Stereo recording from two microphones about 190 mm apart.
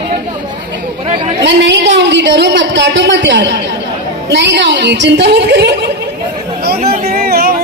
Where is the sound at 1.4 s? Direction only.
70° right (ahead or behind).